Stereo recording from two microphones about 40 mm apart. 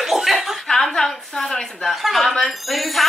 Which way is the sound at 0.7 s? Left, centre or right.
Centre.